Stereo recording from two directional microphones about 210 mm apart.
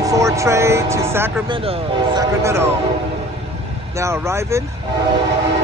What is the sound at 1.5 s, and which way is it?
Speech, 25° right (ahead or behind).